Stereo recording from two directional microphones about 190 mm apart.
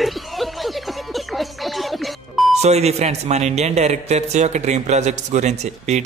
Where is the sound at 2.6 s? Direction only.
35° right (ahead or behind).